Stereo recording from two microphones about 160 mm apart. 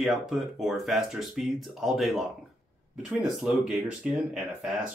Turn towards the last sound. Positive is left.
turn(degrees=-5)  # may be behind; listen again after turning